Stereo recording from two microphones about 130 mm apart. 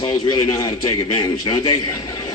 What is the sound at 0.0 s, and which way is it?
A man's voice, 30° left (ahead or behind).